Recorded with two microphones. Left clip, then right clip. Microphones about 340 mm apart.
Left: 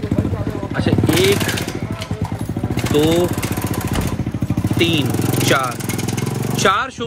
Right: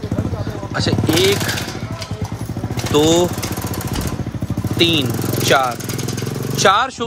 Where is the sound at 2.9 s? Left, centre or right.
Centre.